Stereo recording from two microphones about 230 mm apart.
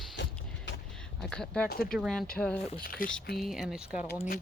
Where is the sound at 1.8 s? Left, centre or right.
Centre.